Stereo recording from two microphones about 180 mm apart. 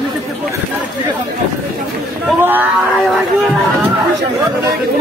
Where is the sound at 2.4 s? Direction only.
10° right (ahead or behind).